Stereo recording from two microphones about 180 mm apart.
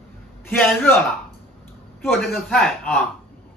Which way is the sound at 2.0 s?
Centre (ahead or behind).